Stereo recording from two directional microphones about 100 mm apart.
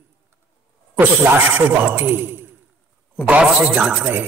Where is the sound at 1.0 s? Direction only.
20° right (ahead or behind).